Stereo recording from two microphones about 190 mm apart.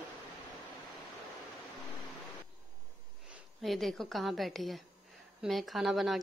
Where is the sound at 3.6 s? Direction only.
Centre (ahead or behind).